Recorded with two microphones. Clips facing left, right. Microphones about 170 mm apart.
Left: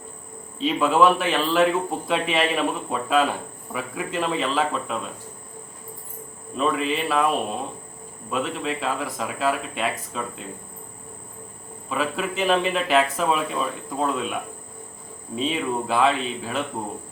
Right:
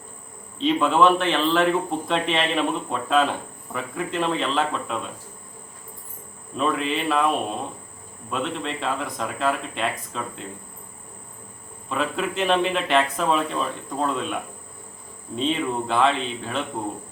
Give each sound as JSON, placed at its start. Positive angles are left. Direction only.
{"t": 0.6, "sound": "a man's voice", "side_deg": 5}
{"t": 6.6, "sound": "a man's voice", "side_deg": 0}
{"t": 8.3, "sound": "a man's voice", "side_deg": 0}
{"t": 11.9, "sound": "a man's voice", "side_deg": 0}
{"t": 15.4, "sound": "a man's voice", "side_deg": 5}